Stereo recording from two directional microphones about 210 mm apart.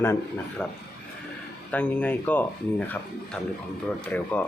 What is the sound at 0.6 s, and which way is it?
Speech, 5° left (ahead or behind).